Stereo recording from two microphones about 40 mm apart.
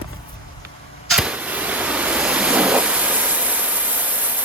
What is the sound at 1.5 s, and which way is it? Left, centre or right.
Waves, right.